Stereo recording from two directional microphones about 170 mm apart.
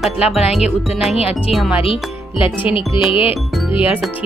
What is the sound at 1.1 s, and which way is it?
Speech, 35° left (ahead or behind).